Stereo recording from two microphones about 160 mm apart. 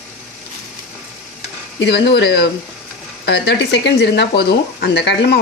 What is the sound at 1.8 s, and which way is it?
Speech, 90° left.